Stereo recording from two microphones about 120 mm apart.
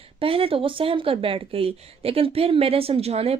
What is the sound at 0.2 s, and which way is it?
Speech, 50° right (ahead or behind).